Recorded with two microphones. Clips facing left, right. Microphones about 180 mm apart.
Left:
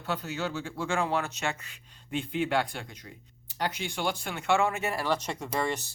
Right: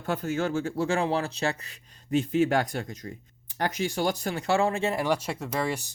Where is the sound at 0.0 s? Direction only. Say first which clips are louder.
Right 5 dB; 50° right (ahead or behind); by 5.8 s 5° right (ahead or behind).